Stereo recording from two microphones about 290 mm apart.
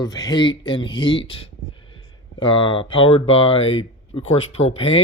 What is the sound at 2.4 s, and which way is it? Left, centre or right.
Speech, centre.